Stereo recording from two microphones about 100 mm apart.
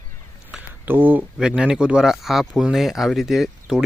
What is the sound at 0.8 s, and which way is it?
Speech, 20° right (ahead or behind).